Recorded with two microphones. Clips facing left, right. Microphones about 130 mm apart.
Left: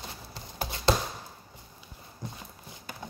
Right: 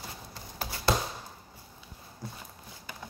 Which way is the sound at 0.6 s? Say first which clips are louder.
Left 2 dB; 20° left (ahead or behind).